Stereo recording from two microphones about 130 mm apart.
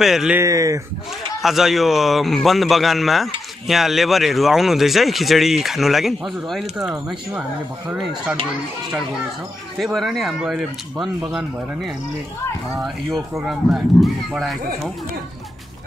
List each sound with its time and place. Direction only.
0.0 s speech: 5° right (ahead or behind)
0.4 s speech: 25° right (ahead or behind)
1.4 s speech: centre (ahead or behind)
9.8 s speech: centre (ahead or behind)
13.4 s speech: 5° right (ahead or behind)